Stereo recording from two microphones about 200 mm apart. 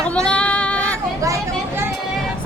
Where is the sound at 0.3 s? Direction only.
5° left (ahead or behind).